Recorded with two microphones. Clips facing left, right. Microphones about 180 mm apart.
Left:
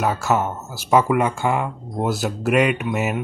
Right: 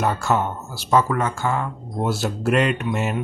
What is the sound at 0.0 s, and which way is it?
Speech, 5° left (ahead or behind).